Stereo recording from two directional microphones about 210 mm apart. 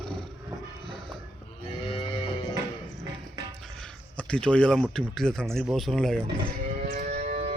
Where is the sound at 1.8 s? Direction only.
25° left (ahead or behind).